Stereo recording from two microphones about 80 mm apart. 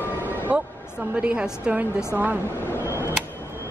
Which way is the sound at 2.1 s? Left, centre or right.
Right.